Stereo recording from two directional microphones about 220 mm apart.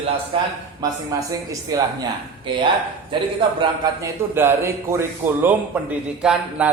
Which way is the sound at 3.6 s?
10° right (ahead or behind).